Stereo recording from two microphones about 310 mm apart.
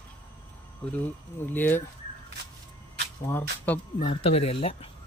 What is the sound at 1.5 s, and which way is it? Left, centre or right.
Speech, centre.